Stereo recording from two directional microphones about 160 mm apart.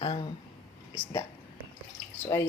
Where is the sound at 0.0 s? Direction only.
35° left (ahead or behind).